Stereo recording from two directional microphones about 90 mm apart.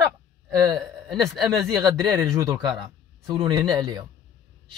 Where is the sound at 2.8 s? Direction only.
50° right (ahead or behind).